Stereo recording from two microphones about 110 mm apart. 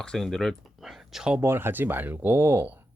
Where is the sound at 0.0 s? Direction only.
5° left (ahead or behind).